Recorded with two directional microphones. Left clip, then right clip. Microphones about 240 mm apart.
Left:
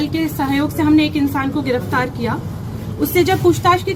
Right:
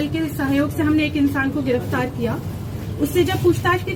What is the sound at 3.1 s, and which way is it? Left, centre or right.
Speech, centre.